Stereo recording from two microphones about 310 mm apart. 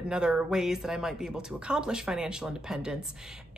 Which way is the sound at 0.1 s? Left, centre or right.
Centre.